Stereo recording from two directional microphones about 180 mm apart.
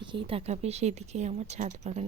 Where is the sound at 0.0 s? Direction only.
25° right (ahead or behind).